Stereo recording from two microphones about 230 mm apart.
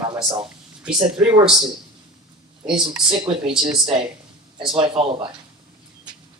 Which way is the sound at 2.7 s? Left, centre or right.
Centre.